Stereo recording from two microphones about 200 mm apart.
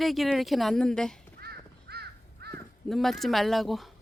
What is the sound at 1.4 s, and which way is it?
Crow, 50° right (ahead or behind).